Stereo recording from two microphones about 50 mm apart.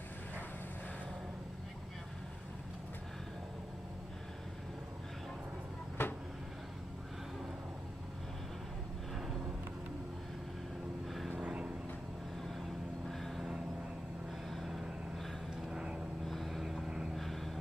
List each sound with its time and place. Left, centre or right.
6.0 s vehicle: left
11.1 s vehicle: centre
11.4 s vehicle: right
14.5 s vehicle: centre
15.7 s vehicle: centre
16.3 s vehicle: centre
16.8 s vehicle: centre
17.1 s vehicle: centre